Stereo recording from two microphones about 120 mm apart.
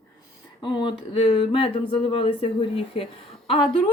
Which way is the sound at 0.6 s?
40° left (ahead or behind).